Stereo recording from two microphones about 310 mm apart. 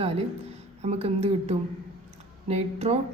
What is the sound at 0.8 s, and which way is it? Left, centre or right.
Speech, centre.